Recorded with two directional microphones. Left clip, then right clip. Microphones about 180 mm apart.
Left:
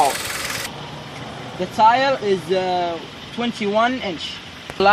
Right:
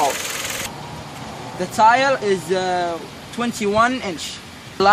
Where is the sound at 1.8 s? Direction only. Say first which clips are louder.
Right 1 dB; 5° left (ahead or behind).